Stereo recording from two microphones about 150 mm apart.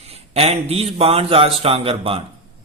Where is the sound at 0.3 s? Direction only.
40° right (ahead or behind).